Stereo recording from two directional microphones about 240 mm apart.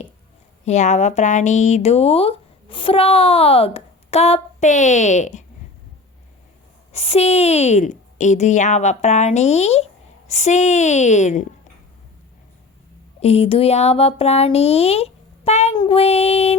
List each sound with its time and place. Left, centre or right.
0.6 s speech: left
6.9 s speech: left
13.1 s speech: left